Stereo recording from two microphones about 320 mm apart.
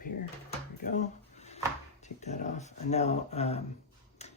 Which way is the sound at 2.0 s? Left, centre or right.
Left.